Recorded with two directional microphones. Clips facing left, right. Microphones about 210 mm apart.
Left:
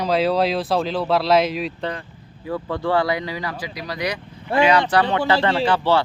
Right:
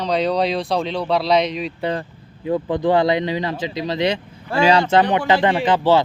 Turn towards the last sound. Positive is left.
turn(degrees=-15)  # may be behind; listen again after turning